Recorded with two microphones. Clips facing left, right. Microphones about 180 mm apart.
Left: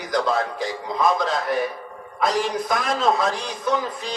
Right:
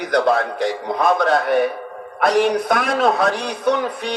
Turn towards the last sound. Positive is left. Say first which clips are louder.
# right 5 dB
turn(degrees=-65)  # may be behind; listen again after turning